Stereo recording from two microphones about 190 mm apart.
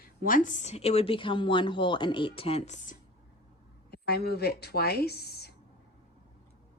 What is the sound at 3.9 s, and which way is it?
Speech, 55° left (ahead or behind).